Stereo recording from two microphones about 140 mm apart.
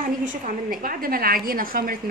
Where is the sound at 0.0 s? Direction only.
80° right.